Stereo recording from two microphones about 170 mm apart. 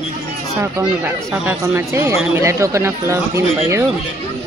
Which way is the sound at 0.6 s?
15° right (ahead or behind).